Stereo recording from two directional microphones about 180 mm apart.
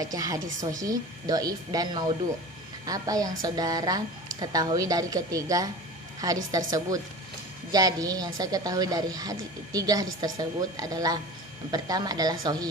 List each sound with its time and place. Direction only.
0.0 s a woman's voice: 20° right (ahead or behind)